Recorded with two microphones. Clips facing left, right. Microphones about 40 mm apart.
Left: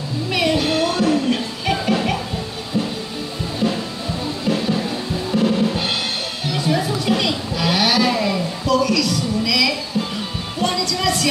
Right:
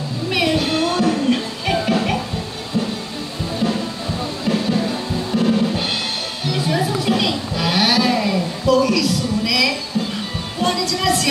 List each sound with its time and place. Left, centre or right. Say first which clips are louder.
0.3 s music: even; centre
4.5 s music: right 1 dB; centre